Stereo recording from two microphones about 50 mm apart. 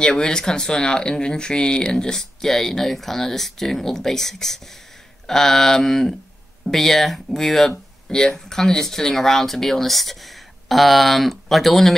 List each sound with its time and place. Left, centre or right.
0.0 s speech: centre